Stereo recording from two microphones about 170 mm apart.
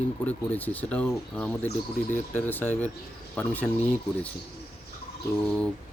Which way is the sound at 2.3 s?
10° left (ahead or behind).